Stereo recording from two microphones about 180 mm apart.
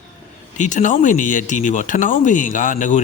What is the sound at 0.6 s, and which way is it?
Speech, 45° left (ahead or behind).